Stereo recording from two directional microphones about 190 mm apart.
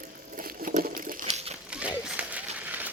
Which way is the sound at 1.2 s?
30° right (ahead or behind).